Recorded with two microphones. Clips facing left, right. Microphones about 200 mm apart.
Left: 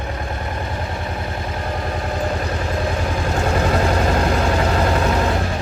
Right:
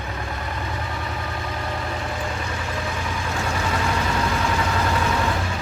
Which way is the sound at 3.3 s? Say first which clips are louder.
Left 7 dB; 50° left (ahead or behind).